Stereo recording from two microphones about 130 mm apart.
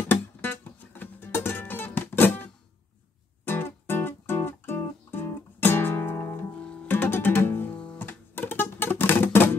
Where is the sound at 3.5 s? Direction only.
15° left (ahead or behind).